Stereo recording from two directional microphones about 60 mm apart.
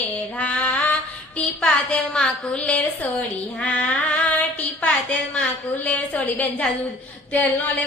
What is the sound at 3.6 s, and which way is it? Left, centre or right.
Child singing, left.